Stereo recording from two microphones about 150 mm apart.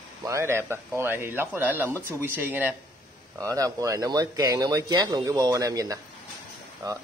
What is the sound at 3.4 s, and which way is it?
Speech, 25° right (ahead or behind).